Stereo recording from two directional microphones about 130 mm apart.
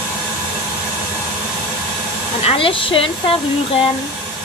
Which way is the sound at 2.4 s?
45° left (ahead or behind).